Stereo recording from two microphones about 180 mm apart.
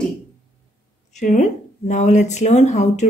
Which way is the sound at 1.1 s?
40° left (ahead or behind).